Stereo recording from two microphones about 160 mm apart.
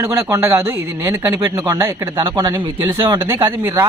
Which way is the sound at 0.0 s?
20° right (ahead or behind).